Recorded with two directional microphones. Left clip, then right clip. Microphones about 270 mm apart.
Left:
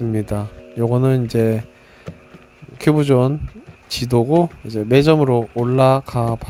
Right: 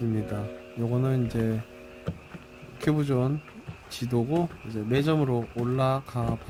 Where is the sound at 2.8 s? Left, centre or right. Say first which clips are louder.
Left 12 dB; left.